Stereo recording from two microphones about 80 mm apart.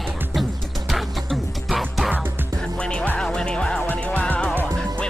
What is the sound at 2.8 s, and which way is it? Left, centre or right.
Music, centre.